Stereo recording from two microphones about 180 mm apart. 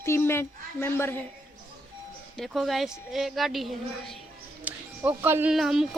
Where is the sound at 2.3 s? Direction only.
Centre (ahead or behind).